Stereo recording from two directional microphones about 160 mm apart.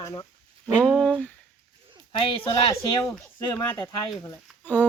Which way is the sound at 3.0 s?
10° left (ahead or behind).